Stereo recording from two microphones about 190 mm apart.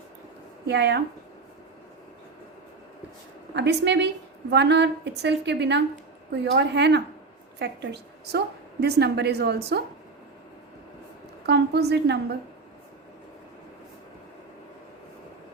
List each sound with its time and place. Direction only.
0.7 s a woman's voice: 65° right (ahead or behind)
3.5 s a woman's voice: 65° right (ahead or behind)
11.4 s a woman's voice: 60° right (ahead or behind)